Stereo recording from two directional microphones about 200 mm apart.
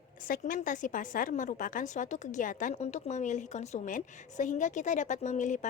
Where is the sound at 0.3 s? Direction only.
45° left (ahead or behind).